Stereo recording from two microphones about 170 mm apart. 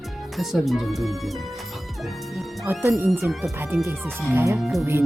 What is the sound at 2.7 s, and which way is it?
Speech, 10° right (ahead or behind).